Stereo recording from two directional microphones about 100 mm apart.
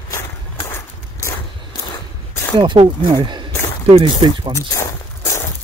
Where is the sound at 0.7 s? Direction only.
25° left (ahead or behind).